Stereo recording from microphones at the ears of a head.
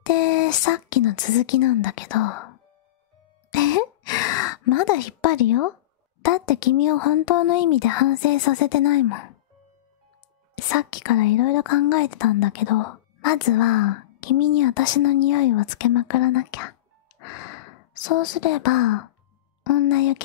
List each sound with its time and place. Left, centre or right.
0.0 s speech: left
3.5 s a sound: left
6.2 s a woman's voice: left
10.5 s a woman's voice: left